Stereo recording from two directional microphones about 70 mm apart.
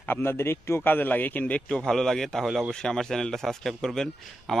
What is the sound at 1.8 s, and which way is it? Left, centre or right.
A man's voice, centre.